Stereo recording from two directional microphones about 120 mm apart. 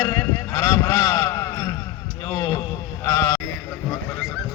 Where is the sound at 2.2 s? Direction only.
30° left (ahead or behind).